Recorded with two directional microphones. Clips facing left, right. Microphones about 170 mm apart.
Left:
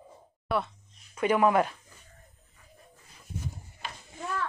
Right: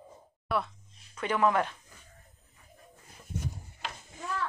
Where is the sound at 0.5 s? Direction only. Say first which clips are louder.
Left 2 dB; centre (ahead or behind).